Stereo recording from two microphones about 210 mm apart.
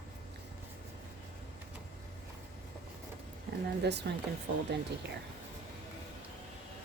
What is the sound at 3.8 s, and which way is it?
Speech, 55° right (ahead or behind).